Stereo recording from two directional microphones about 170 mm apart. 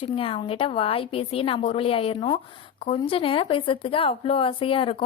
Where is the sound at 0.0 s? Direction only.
30° left (ahead or behind).